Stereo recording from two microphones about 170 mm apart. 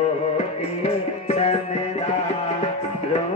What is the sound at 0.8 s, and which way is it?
Music, 35° left (ahead or behind).